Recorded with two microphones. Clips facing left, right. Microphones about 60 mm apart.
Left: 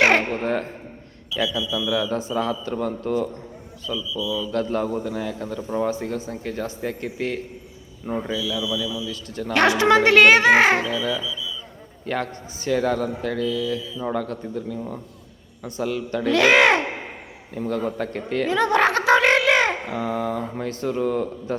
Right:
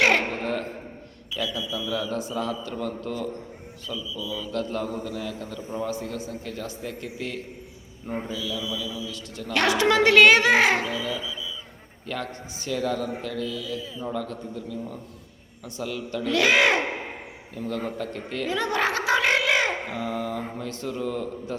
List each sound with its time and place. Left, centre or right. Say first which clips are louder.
0.0 s a sound: left 3 dB; left
1.5 s a man's voice: left 5 dB; right
2.3 s a man's voice: left 5 dB; left
4.0 s a man's voice: left 8 dB; right
4.5 s a man's voice: left 4 dB; left
8.4 s a man's voice: left 5 dB; right
9.1 s a man's voice: left 5 dB; left
10.8 s speech: left 4 dB; right
12.0 s a man's voice: left 5 dB; left
17.5 s a man's voice: left 5 dB; left
18.3 s a sound: left 7 dB; left
20.6 s a man's voice: left 6 dB; left